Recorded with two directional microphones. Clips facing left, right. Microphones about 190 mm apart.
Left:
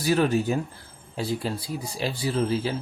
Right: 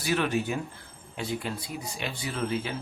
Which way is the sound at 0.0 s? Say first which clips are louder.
Left 5 dB; 40° left (ahead or behind).